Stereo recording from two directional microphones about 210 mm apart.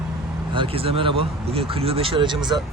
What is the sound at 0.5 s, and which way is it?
Speech, 25° right (ahead or behind).